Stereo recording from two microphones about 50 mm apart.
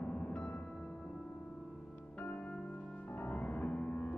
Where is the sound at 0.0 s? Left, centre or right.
Left.